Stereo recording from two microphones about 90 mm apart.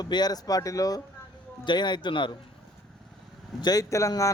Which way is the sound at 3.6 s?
45° left (ahead or behind).